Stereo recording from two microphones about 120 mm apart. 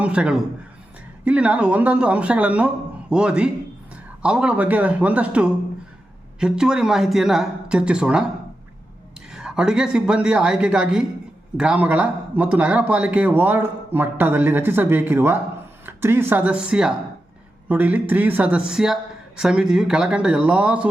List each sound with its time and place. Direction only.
0.0 s a man's voice: 10° right (ahead or behind)
9.3 s a man's voice: 5° right (ahead or behind)